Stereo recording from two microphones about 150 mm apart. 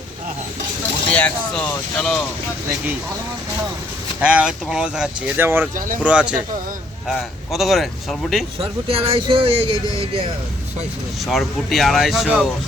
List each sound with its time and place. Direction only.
1.1 s speech: 10° left (ahead or behind)
4.2 s speech: 10° right (ahead or behind)
8.5 s speech: 40° right (ahead or behind)
9.8 s speech: 20° left (ahead or behind)
11.3 s speech: centre (ahead or behind)